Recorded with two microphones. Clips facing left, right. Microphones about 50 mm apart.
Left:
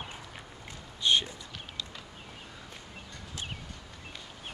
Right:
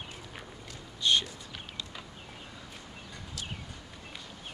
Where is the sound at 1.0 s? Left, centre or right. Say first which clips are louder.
Left 1 dB; centre.